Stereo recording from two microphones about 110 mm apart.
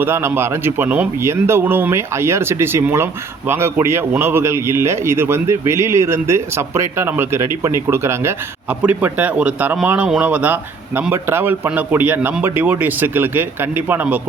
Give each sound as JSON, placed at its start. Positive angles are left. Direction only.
{"t": 0.0, "sound": "speech", "side_deg": -20}